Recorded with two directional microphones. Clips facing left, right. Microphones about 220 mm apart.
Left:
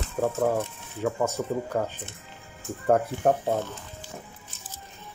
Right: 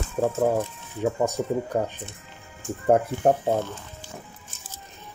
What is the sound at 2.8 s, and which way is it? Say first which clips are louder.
Speech: right 2 dB; 25° right (ahead or behind).